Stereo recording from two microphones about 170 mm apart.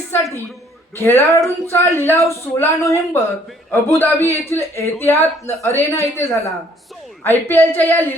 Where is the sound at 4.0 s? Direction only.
15° left (ahead or behind).